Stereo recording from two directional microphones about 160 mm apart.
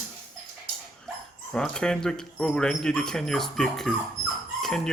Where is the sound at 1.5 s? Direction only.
5° left (ahead or behind).